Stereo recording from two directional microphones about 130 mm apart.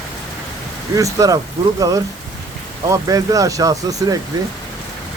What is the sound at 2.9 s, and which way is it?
Speech, 25° right (ahead or behind).